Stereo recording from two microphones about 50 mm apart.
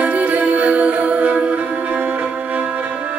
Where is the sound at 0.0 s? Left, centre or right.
Right.